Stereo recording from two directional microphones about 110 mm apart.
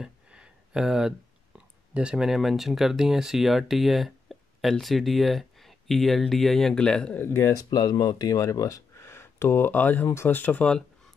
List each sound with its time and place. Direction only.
0.0 s speech: 5° right (ahead or behind)
7.2 s speech: 20° left (ahead or behind)
7.7 s speech: 35° left (ahead or behind); by 10.8 s 15° left (ahead or behind)